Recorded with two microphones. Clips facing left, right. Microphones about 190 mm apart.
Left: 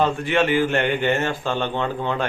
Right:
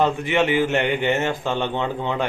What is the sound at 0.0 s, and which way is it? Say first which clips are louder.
Speech: even; 20° right (ahead or behind).